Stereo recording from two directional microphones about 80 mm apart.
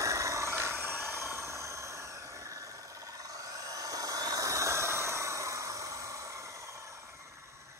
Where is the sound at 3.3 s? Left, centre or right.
Right.